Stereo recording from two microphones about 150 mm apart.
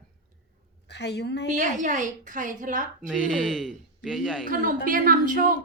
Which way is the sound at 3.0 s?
5° left (ahead or behind).